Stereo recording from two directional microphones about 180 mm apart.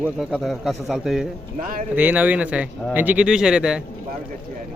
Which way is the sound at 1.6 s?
50° right (ahead or behind).